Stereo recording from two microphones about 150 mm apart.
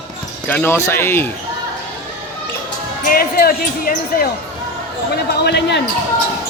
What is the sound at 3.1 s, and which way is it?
Speech, 80° left.